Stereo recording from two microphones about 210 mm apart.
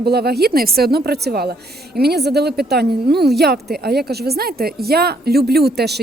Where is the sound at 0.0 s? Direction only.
50° right (ahead or behind).